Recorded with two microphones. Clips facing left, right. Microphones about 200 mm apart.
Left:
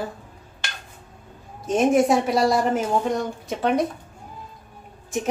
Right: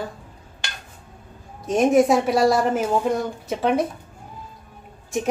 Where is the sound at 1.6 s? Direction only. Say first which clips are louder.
Right 2 dB; centre (ahead or behind).